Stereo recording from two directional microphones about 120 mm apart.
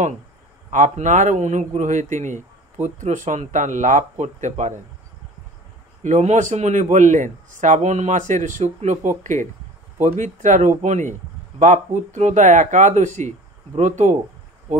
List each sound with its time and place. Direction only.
0.7 s a man's voice: 90° right
6.0 s a man's voice: 90° right